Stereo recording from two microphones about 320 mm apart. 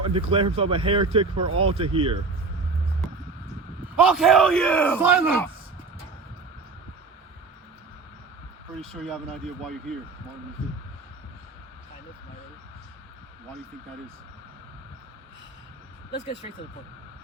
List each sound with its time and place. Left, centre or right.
0.0 s speech: centre
3.9 s speech: centre
8.8 s speech: centre